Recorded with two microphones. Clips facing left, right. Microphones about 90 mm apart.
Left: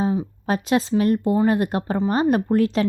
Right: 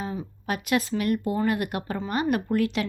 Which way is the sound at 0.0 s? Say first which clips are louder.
Left 9 dB; 30° left (ahead or behind).